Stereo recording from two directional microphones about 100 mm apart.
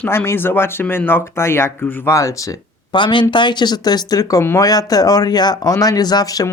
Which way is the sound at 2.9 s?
55° left (ahead or behind).